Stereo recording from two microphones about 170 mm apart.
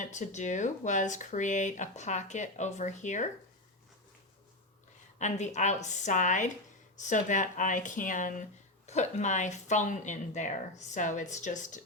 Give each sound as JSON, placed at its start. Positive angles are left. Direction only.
{"t": 0.0, "sound": "speech", "side_deg": 45}
{"t": 5.2, "sound": "speech", "side_deg": 45}